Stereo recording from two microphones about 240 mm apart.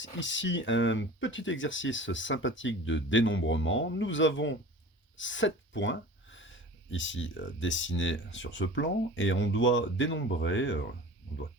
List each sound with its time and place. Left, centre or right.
0.0 s speech: left
5.1 s a sound: left
6.9 s speech: left